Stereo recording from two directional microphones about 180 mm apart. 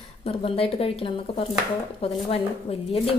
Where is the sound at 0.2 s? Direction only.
30° left (ahead or behind).